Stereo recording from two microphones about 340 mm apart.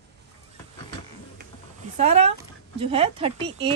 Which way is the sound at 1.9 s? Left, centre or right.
Centre.